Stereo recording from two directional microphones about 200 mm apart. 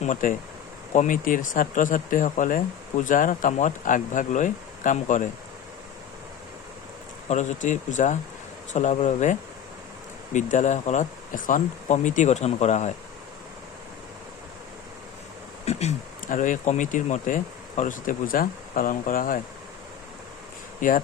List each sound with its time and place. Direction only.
0.0 s speech: 40° left (ahead or behind)
7.3 s speech: 35° left (ahead or behind)
15.6 s speech: 35° left (ahead or behind)
20.8 s speech: 40° left (ahead or behind)